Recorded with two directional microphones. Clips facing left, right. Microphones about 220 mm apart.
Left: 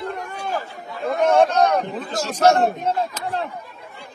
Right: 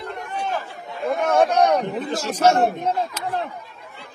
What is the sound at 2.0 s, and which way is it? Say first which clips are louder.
Speech: even; 10° right (ahead or behind).